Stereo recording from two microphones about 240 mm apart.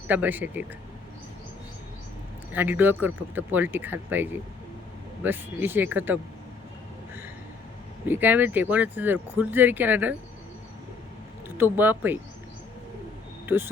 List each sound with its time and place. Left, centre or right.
0.1 s speech: centre
2.5 s speech: centre
8.0 s speech: centre
11.4 s speech: centre
13.4 s a sound: centre